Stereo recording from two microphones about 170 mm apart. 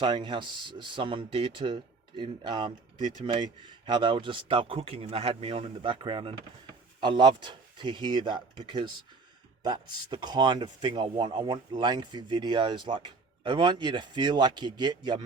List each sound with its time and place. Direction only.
0.0 s speech: 25° right (ahead or behind)